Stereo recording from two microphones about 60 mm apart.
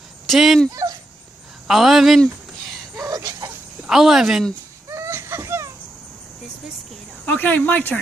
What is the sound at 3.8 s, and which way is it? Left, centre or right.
Speech, centre.